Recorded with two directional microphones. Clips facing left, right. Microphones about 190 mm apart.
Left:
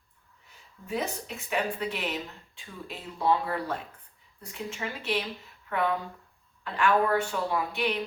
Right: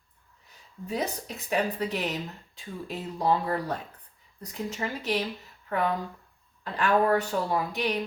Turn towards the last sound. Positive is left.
turn(degrees=-40)  # may be behind; listen again after turning